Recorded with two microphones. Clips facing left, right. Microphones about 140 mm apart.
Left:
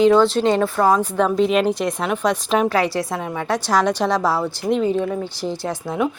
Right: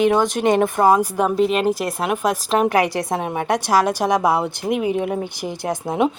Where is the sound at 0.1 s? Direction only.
15° right (ahead or behind).